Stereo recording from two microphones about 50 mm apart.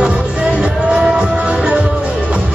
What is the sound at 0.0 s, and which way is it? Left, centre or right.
Music, right.